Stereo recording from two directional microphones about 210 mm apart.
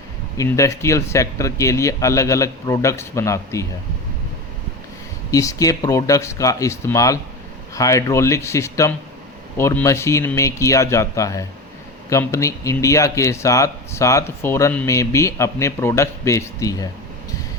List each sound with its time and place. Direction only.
0.3 s speech: 15° left (ahead or behind)
5.3 s speech: 15° left (ahead or behind)